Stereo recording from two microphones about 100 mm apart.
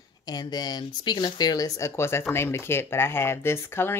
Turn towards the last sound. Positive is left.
turn(degrees=25)  # may be behind; listen again after turning